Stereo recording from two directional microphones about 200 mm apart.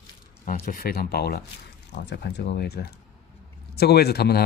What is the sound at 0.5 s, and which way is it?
Speech, 45° left (ahead or behind).